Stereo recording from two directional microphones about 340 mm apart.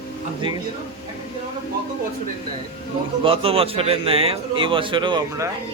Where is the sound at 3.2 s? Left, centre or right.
Centre.